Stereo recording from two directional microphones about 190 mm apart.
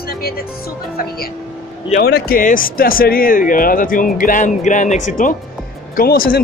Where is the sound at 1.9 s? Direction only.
55° left (ahead or behind).